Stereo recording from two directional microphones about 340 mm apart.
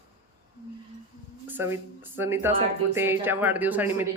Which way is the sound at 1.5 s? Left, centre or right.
Centre.